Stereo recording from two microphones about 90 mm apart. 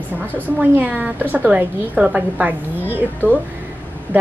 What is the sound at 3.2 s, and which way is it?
Speech, 20° left (ahead or behind).